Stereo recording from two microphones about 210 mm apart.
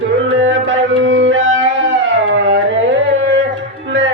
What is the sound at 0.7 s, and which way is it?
Music, 60° right (ahead or behind).